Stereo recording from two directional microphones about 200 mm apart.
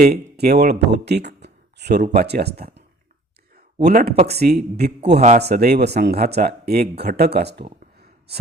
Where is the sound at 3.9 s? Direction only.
50° right (ahead or behind).